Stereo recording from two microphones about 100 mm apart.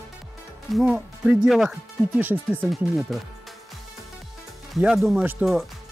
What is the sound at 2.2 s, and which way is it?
Speech, 20° right (ahead or behind).